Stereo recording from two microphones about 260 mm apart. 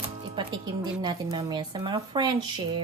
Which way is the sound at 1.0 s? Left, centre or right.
Centre.